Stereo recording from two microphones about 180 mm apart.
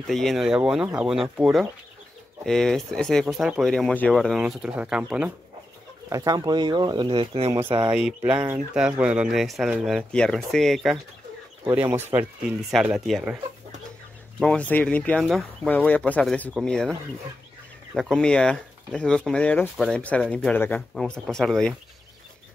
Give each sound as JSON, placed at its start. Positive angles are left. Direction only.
{"t": 0.0, "sound": "speech", "side_deg": 0}
{"t": 6.0, "sound": "speech", "side_deg": -20}
{"t": 7.9, "sound": "speech", "side_deg": -5}
{"t": 11.7, "sound": "speech", "side_deg": -10}
{"t": 12.8, "sound": "speech", "side_deg": 0}
{"t": 14.4, "sound": "speech", "side_deg": 5}
{"t": 17.9, "sound": "speech", "side_deg": 0}